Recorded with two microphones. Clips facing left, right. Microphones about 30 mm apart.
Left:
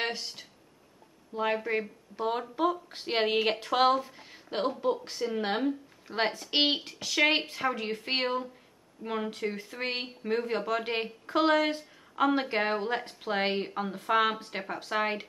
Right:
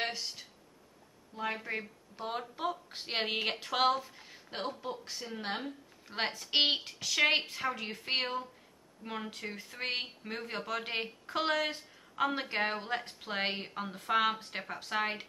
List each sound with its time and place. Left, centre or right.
0.0 s speech: centre
1.3 s speech: left
1.6 s speech: centre